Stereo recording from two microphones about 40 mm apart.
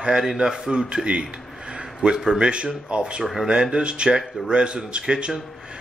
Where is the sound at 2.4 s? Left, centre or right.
Right.